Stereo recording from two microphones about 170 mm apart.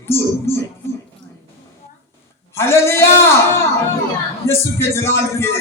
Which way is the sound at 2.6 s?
15° left (ahead or behind).